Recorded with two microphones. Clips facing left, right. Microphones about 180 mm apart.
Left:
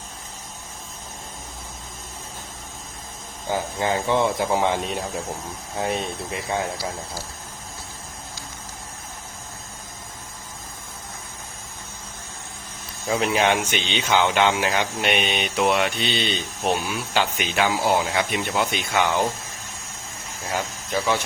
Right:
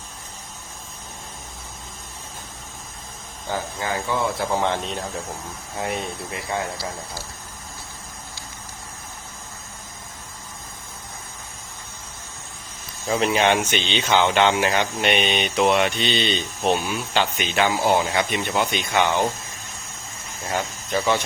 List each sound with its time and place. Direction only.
3.5 s speech: 20° left (ahead or behind)
13.1 s speech: centre (ahead or behind)
13.7 s speech: 15° left (ahead or behind)
20.5 s speech: centre (ahead or behind)